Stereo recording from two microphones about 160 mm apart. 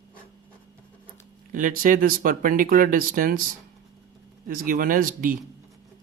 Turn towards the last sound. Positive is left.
turn(degrees=-60)  # may be behind; listen again after turning